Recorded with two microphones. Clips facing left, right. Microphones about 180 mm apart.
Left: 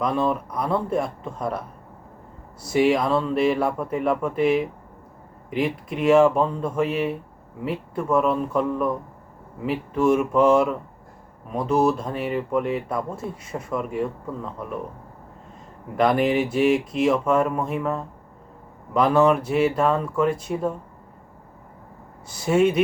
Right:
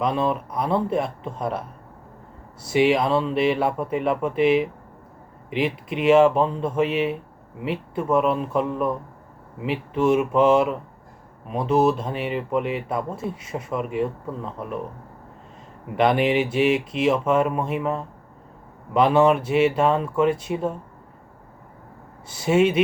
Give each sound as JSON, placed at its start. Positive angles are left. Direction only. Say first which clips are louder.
{"t": 0.0, "sound": "speech", "louder": "even", "side_deg": 0}
{"t": 16.0, "sound": "speech", "louder": "even", "side_deg": 0}
{"t": 19.1, "sound": "speech", "louder": "even", "side_deg": -25}
{"t": 19.4, "sound": "speech", "louder": "right 1 dB", "side_deg": 0}
{"t": 19.7, "sound": "speech", "louder": "right 1 dB", "side_deg": -25}
{"t": 20.2, "sound": "speech", "louder": "right 1 dB", "side_deg": 0}
{"t": 22.3, "sound": "speech", "louder": "even", "side_deg": 0}